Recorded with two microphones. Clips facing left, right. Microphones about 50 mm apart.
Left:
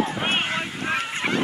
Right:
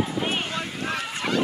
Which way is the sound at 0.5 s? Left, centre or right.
Left.